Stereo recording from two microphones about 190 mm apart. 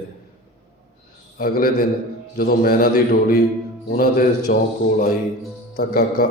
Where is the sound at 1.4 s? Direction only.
50° left (ahead or behind).